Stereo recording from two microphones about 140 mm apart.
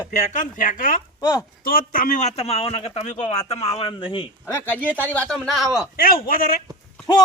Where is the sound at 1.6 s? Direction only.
85° left; by 4.3 s 40° left (ahead or behind).